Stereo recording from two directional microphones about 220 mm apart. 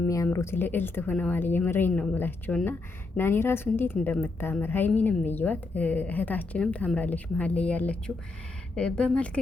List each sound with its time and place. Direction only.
0.0 s a woman's voice: 10° left (ahead or behind)